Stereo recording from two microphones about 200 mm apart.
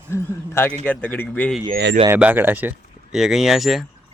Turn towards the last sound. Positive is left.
turn(degrees=0)  # may be behind; listen again after turning